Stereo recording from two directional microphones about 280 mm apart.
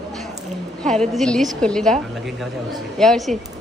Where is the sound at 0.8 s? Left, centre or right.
Centre.